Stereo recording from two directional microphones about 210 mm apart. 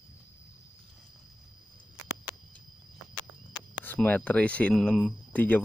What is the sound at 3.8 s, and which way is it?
Speech, 10° left (ahead or behind).